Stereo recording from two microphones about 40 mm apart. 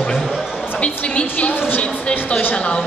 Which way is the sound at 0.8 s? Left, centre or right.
Left.